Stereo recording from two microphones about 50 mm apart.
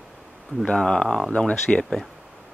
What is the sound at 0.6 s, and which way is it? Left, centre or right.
Speech, centre.